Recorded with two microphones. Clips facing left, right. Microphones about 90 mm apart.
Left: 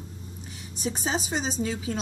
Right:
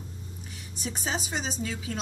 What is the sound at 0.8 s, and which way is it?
A woman's voice, 30° left (ahead or behind).